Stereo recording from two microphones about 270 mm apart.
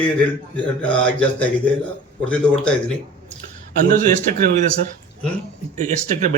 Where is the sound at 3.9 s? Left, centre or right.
Right.